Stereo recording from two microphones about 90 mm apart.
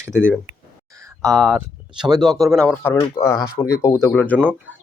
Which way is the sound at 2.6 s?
25° left (ahead or behind).